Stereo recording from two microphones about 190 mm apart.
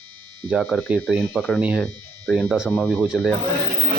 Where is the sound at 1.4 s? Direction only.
Centre (ahead or behind).